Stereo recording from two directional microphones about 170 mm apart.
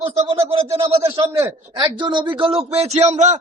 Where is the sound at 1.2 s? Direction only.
10° right (ahead or behind).